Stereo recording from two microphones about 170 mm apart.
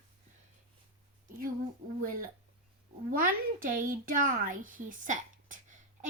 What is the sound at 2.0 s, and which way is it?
Speech, 55° right (ahead or behind).